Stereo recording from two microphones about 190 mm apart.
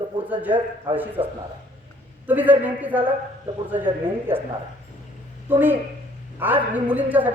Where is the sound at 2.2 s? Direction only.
10° right (ahead or behind).